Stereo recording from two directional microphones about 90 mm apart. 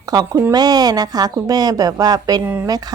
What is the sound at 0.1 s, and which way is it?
A woman's voice, 45° right (ahead or behind).